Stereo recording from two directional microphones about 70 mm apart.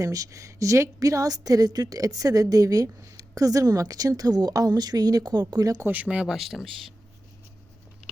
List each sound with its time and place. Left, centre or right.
0.0 s a woman's voice: right
5.9 s speech: centre
6.3 s speech: centre